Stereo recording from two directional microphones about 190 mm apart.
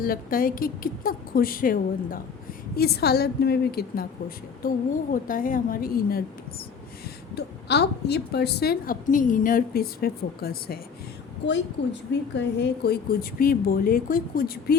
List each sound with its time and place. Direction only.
0.0 s a woman's voice: 50° left (ahead or behind)
5.1 s a woman's voice: 45° left (ahead or behind)
7.3 s a woman's voice: 60° left (ahead or behind)
11.4 s a woman's voice: 65° left (ahead or behind)